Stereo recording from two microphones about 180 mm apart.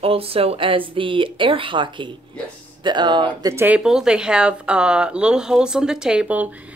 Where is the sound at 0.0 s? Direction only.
30° right (ahead or behind).